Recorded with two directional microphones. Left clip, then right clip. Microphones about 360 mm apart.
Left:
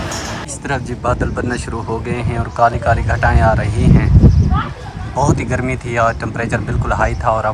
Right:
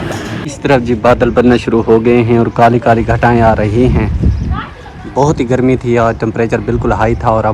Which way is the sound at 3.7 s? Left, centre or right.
Left.